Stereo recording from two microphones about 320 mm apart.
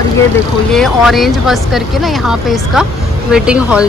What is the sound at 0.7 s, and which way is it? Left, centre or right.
Speech, centre.